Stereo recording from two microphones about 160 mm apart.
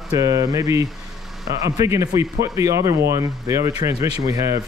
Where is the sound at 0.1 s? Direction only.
20° right (ahead or behind).